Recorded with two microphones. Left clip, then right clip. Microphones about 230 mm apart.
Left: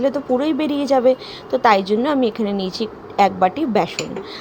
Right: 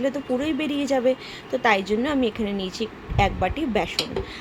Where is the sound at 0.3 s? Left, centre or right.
Centre.